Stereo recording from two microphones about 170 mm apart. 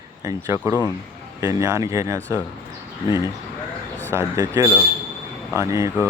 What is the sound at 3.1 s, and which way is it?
Speech, 20° left (ahead or behind).